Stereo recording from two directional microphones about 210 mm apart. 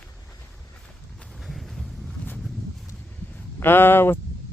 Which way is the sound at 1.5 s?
Centre (ahead or behind).